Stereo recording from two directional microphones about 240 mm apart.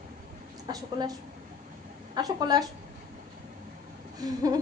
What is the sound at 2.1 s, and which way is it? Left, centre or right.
Speech, centre.